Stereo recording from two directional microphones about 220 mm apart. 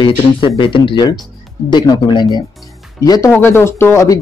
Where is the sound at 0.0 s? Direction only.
25° left (ahead or behind).